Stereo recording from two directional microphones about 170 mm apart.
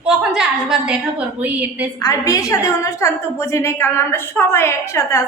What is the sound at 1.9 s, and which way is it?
A woman's voice, 20° left (ahead or behind).